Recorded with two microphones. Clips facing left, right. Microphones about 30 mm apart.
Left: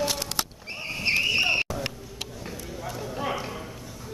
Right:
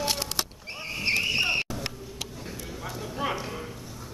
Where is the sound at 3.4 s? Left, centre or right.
Centre.